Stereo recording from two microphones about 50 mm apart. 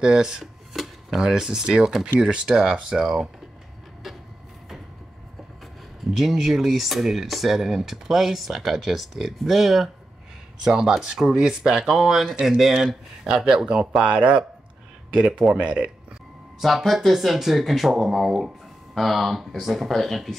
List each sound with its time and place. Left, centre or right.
0.0 s speech: centre
6.1 s speech: centre
10.6 s speech: centre
14.0 s speech: right
16.5 s speech: centre